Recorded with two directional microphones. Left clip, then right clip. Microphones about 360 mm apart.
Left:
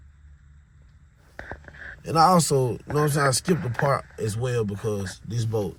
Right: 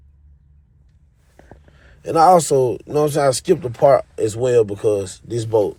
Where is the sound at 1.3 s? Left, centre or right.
Right.